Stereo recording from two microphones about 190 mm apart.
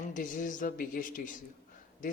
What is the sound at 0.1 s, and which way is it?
Speech, 45° left (ahead or behind).